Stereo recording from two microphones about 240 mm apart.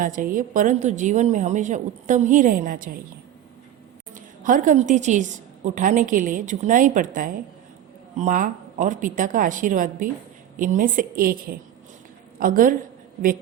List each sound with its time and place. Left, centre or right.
0.0 s a woman's voice: right
4.1 s a woman's voice: right